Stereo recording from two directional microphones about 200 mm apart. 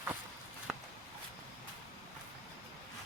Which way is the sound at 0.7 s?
Centre (ahead or behind).